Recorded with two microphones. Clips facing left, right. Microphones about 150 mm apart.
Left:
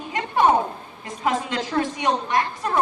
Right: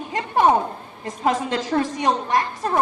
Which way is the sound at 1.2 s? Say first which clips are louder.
Right 2 dB; 35° right (ahead or behind).